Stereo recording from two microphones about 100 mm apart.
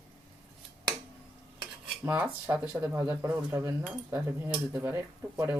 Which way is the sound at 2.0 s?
20° right (ahead or behind).